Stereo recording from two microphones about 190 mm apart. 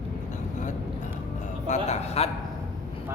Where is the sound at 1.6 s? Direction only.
35° left (ahead or behind).